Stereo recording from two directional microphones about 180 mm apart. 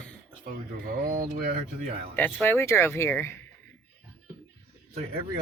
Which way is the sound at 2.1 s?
10° left (ahead or behind).